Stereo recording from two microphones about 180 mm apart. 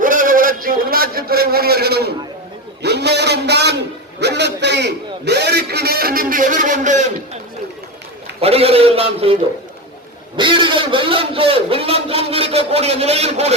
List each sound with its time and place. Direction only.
0.0 s a sound: 50° right (ahead or behind); by 3.8 s 70° right (ahead or behind)
4.2 s a man's voice: 70° right (ahead or behind); by 7.1 s 40° right (ahead or behind)
8.4 s a man's voice: 35° right (ahead or behind)